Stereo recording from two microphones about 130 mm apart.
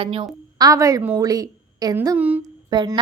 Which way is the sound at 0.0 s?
45° right (ahead or behind).